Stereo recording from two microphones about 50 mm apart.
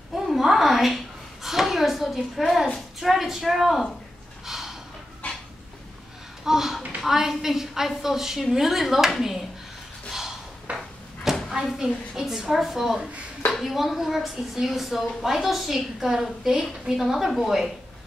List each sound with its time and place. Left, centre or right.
0.1 s a sound: centre
3.0 s a woman's voice: centre
4.5 s gasp: centre
6.4 s a sound: centre
7.0 s a woman's voice: centre
10.7 s drawer open or close: right
11.5 s a woman's voice: centre